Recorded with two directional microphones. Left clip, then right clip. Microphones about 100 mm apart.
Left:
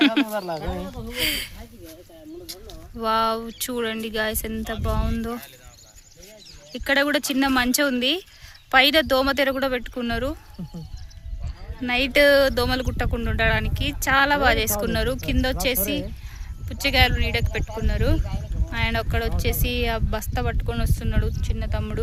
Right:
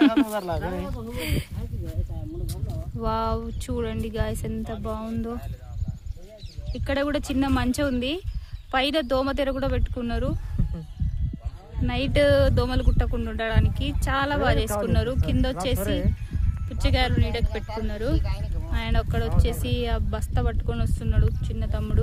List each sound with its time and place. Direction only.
0.3 s speech: 35° left (ahead or behind)
1.1 s speech: 15° right (ahead or behind)
3.0 s speech: 5° right (ahead or behind)
6.7 s speech: 10° left (ahead or behind)
11.8 s speech: 15° left (ahead or behind)